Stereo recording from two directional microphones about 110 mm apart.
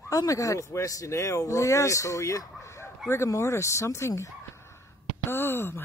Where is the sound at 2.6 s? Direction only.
25° left (ahead or behind).